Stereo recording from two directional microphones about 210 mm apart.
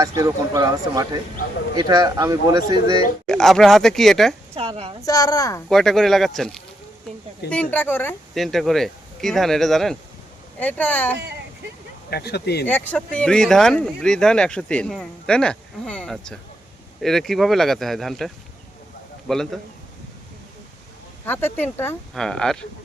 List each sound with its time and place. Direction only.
0.0 s a man's voice: 15° right (ahead or behind)
3.2 s speech: centre (ahead or behind)
4.5 s a woman's voice: 30° right (ahead or behind)
5.0 s speech: 15° left (ahead or behind)
5.6 s speech: centre (ahead or behind)
12.1 s speech: 50° left (ahead or behind)
12.6 s speech: 10° left (ahead or behind)
19.3 s speech: centre (ahead or behind)
21.2 s speech: 10° left (ahead or behind)